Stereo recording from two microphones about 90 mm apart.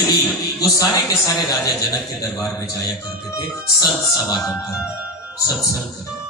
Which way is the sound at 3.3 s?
45° left (ahead or behind).